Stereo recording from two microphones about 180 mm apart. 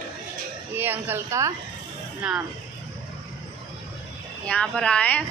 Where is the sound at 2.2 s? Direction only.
5° right (ahead or behind).